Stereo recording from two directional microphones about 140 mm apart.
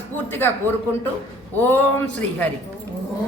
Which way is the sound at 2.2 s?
10° left (ahead or behind).